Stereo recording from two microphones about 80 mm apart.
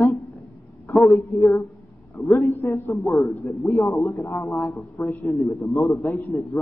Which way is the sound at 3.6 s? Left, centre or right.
Left.